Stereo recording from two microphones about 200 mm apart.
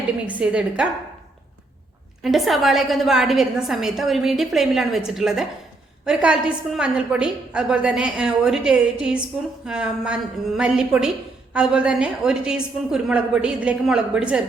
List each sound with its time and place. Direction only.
0.3 s a woman's voice: 5° right (ahead or behind)
2.2 s a woman's voice: centre (ahead or behind)